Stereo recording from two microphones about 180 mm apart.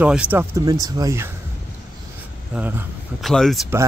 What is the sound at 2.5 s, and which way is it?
Speech, 10° right (ahead or behind).